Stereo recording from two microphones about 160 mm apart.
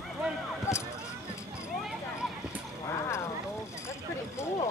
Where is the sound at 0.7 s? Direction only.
15° left (ahead or behind).